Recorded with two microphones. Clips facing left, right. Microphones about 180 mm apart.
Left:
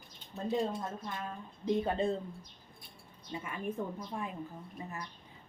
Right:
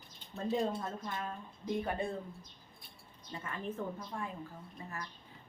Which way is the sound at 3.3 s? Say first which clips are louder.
Left 3 dB; 10° left (ahead or behind).